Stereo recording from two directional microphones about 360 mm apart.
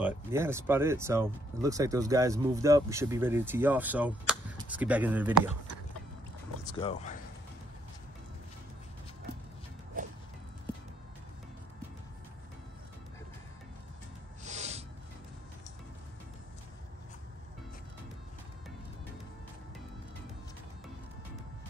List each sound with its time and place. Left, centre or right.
0.0 s speech: centre
6.6 s speech: centre
9.9 s music: right
14.4 s a sound: centre